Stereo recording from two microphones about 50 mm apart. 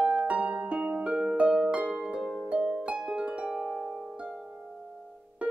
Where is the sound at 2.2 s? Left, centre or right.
Centre.